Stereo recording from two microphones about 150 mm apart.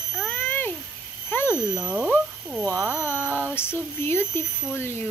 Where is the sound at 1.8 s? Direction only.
5° right (ahead or behind).